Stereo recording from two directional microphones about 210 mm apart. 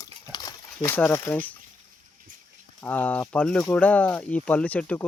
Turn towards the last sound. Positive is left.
turn(degrees=5)  # may be behind; listen again after turning